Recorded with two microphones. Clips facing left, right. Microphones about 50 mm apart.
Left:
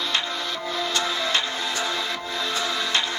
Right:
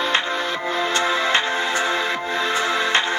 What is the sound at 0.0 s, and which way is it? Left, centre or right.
Music, right.